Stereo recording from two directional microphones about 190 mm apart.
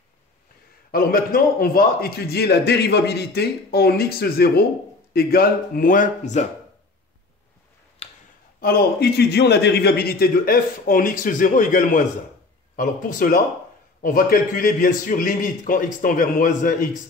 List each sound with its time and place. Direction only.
0.9 s a man's voice: 50° left (ahead or behind)
8.0 s a sound: 30° left (ahead or behind)
8.5 s a man's voice: 55° left (ahead or behind)